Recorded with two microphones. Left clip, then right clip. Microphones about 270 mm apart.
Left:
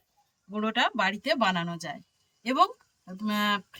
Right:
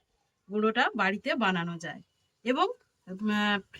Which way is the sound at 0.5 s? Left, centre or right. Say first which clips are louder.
Even; centre.